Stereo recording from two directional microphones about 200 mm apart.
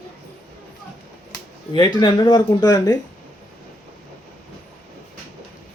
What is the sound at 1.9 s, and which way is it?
Speech, 25° left (ahead or behind).